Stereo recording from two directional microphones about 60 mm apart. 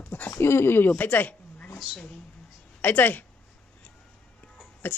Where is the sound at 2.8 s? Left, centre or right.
Left.